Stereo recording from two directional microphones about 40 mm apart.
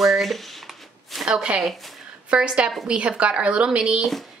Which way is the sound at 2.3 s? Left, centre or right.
Right.